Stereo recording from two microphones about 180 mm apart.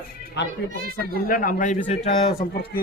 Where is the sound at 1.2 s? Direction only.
50° left (ahead or behind).